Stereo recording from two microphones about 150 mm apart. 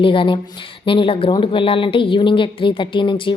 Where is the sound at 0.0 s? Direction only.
35° left (ahead or behind).